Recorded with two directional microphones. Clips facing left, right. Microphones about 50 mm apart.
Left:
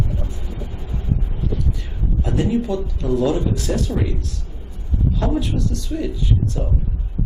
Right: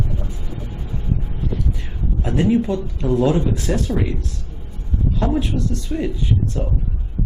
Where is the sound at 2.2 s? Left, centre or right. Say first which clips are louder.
Right 3 dB; right.